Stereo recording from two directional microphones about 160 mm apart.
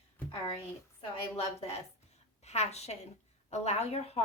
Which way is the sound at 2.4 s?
45° left (ahead or behind).